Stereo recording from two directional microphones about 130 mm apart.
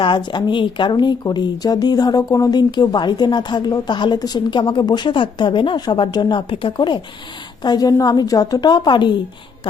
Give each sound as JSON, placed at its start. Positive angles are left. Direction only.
{"t": 0.0, "sound": "speech", "side_deg": 35}